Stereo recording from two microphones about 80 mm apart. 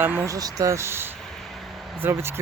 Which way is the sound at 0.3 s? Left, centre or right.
Right.